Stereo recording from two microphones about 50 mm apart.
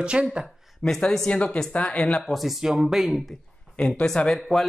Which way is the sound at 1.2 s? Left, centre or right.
Left.